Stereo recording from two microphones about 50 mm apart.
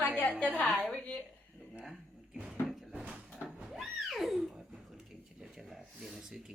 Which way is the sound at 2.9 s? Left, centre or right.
Right.